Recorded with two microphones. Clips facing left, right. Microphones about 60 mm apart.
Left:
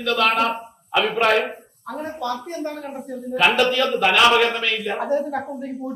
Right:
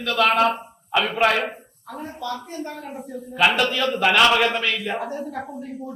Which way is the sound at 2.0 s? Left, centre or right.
Left.